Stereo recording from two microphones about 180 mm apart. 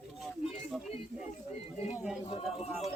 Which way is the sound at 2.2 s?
35° left (ahead or behind).